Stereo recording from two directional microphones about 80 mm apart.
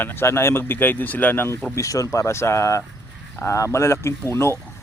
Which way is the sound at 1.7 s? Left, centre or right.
Left.